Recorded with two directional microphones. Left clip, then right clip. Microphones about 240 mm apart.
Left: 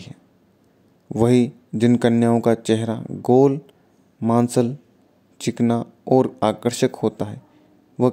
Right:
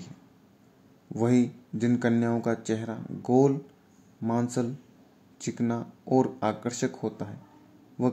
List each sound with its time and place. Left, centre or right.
1.0 s speech: left